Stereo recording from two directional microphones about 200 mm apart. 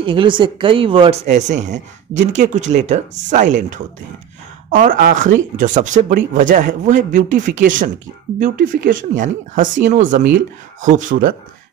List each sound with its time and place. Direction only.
0.0 s speech: 25° right (ahead or behind); by 11.3 s 45° right (ahead or behind)